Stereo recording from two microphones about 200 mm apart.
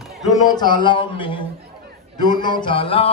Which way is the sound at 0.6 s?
20° left (ahead or behind).